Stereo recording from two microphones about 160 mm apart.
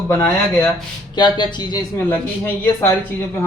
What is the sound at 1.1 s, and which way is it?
Speech, 25° left (ahead or behind).